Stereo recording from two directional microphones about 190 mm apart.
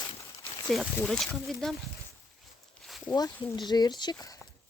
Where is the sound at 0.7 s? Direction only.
Centre (ahead or behind).